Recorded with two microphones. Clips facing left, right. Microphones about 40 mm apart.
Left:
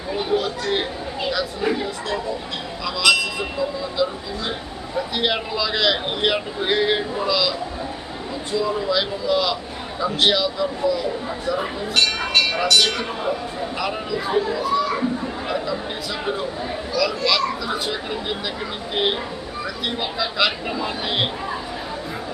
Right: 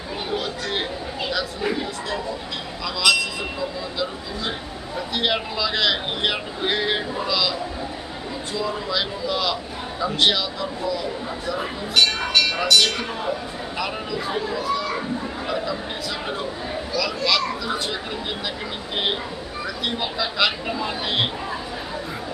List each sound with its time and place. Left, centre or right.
0.2 s chatter: centre
2.8 s speech: centre
4.9 s speech: centre
8.5 s speech: centre
12.3 s speech: centre
12.5 s speech: centre
15.4 s chatter: centre
16.2 s speech: centre